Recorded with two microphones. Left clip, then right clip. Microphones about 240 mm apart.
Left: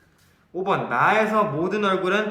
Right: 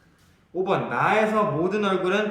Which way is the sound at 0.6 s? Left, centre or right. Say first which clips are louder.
Left 3 dB; centre.